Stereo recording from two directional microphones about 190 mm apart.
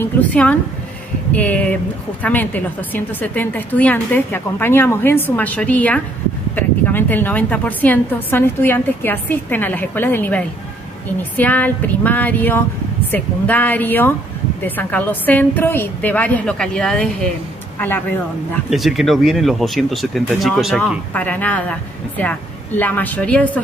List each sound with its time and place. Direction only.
0.0 s a sound: 5° left (ahead or behind)
1.3 s a woman's voice: 10° left (ahead or behind)
18.7 s speech: centre (ahead or behind)